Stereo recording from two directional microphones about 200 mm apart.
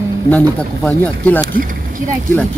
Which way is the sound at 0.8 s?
10° left (ahead or behind).